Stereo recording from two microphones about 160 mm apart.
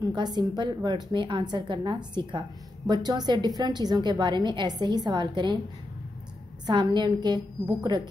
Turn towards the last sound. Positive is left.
turn(degrees=-30)  # may be behind; listen again after turning